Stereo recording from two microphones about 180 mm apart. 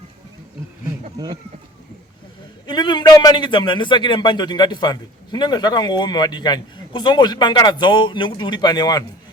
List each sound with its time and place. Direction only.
2.6 s a man's voice: 25° left (ahead or behind)